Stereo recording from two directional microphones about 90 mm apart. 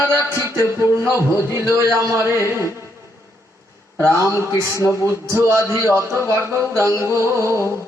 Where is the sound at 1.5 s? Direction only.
30° right (ahead or behind).